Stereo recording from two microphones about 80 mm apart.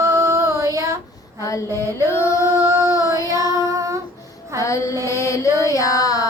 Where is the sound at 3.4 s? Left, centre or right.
Right.